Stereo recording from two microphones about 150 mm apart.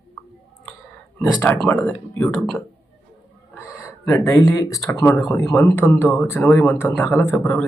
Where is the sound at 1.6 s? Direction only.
10° left (ahead or behind).